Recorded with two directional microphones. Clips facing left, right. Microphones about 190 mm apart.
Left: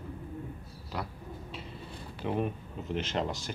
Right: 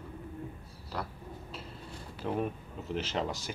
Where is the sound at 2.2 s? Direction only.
Centre (ahead or behind).